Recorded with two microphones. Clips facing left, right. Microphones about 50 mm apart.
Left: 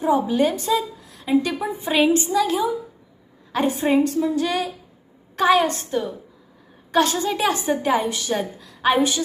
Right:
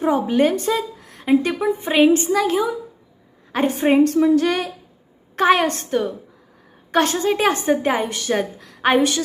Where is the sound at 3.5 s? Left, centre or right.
Right.